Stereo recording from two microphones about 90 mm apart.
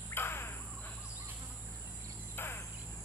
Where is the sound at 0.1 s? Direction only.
25° left (ahead or behind).